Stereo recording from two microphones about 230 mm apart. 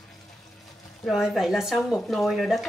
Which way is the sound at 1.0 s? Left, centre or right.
Centre.